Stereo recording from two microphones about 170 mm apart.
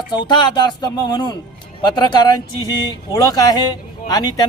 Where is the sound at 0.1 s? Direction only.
25° left (ahead or behind).